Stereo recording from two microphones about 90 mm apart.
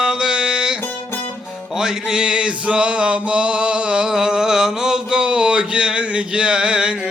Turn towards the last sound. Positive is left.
turn(degrees=-10)  # may be behind; listen again after turning